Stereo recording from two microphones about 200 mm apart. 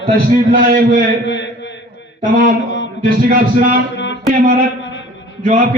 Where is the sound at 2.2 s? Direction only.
50° right (ahead or behind).